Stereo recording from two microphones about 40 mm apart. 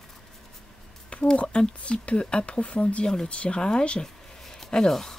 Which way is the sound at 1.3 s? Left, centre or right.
Left.